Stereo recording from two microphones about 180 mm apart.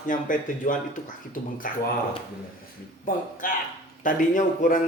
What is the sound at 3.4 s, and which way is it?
A man's voice, 50° left (ahead or behind).